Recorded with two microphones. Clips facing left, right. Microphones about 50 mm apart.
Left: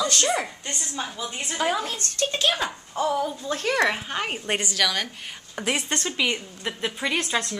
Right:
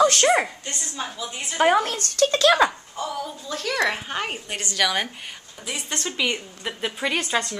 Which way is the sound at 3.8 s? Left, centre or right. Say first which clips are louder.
Even; centre.